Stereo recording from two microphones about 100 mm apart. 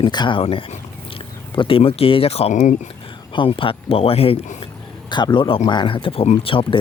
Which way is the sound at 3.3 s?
60° left (ahead or behind).